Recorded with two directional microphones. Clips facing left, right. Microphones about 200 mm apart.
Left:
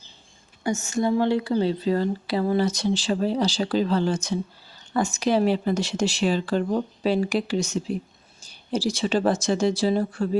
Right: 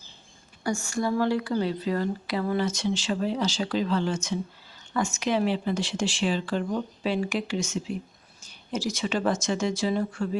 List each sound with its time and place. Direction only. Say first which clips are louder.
0.6 s speech: left 3 dB; 20° left (ahead or behind)